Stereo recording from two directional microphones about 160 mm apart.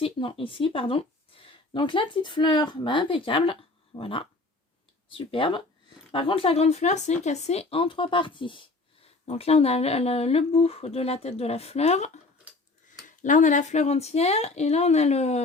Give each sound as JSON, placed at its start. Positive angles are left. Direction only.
{"t": 0.0, "sound": "speech", "side_deg": 35}